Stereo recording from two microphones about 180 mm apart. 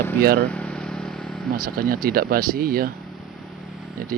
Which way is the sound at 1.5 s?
50° right (ahead or behind).